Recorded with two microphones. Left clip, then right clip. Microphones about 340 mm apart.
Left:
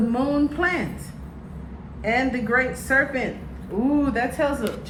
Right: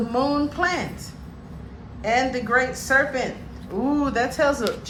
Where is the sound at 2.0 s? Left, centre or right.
Centre.